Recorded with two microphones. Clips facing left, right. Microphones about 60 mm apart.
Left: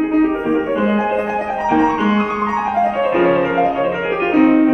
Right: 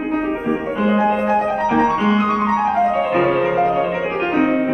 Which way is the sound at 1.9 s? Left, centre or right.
Left.